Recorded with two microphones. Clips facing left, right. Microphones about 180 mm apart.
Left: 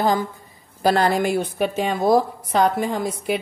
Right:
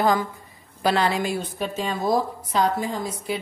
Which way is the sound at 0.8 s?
45° left (ahead or behind).